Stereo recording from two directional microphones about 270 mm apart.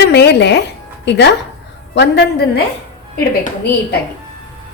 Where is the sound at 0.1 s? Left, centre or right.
Left.